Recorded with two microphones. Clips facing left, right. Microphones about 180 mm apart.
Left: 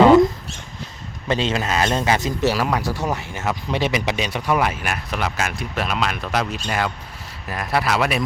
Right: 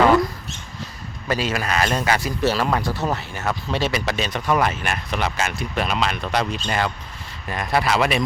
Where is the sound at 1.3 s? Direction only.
25° left (ahead or behind).